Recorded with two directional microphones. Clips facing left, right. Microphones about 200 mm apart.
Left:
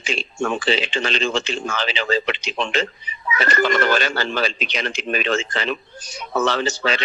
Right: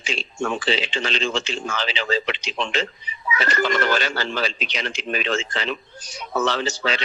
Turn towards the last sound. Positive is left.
turn(degrees=55)  # may be behind; listen again after turning